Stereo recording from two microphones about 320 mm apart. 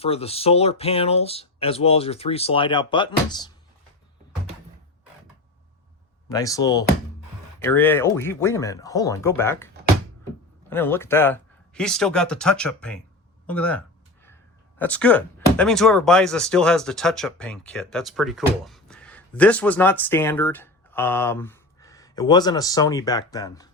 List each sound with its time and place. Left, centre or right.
0.0 s speech: centre
6.2 s speech: centre
10.7 s speech: centre